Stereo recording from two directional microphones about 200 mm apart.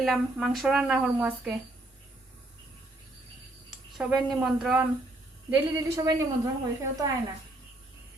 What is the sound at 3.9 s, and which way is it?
Speech, centre (ahead or behind).